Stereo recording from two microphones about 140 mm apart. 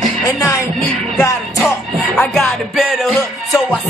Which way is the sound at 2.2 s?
5° left (ahead or behind).